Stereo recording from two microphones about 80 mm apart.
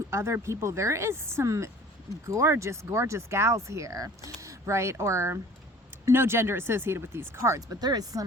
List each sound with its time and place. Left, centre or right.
0.1 s speech: right
7.8 s speech: right